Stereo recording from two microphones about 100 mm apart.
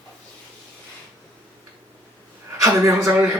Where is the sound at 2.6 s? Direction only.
30° right (ahead or behind).